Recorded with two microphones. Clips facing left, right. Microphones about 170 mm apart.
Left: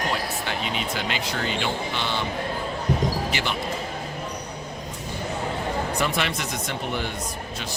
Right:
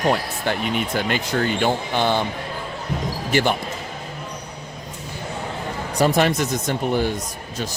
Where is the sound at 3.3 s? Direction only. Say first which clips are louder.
Right 8 dB; 50° right (ahead or behind).